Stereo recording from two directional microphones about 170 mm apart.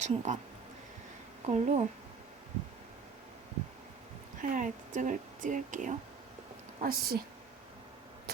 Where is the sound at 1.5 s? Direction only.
40° right (ahead or behind).